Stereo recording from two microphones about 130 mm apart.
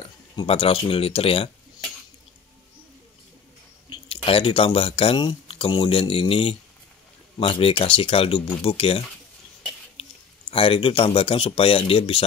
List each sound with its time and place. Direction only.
0.0 s speech: 45° left (ahead or behind)
3.9 s speech: 45° left (ahead or behind)
10.5 s speech: 45° left (ahead or behind)